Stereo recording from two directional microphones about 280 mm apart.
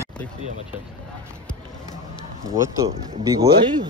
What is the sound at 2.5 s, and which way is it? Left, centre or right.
Speech, centre.